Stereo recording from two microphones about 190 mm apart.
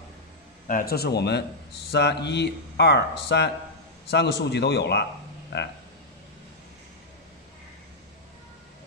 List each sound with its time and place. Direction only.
0.7 s speech: 50° left (ahead or behind)